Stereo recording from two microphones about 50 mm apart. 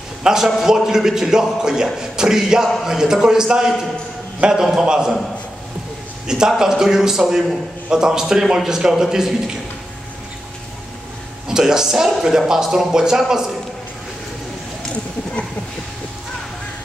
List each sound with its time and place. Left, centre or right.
0.2 s a man's voice: centre
6.2 s a man's voice: centre
11.4 s speech: centre